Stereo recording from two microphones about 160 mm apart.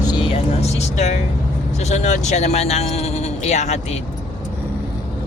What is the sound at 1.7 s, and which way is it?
Speech, 45° left (ahead or behind).